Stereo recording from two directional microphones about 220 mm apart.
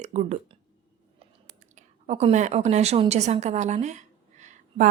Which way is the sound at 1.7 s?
30° right (ahead or behind).